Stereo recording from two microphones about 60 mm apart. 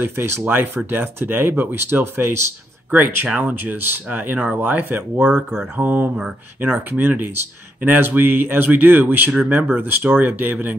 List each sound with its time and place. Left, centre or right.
0.0 s speech: right